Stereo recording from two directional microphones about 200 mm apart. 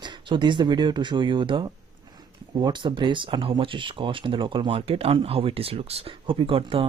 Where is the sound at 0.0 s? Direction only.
25° right (ahead or behind).